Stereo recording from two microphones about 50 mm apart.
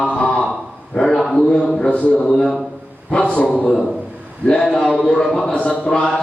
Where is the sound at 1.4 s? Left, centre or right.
Centre.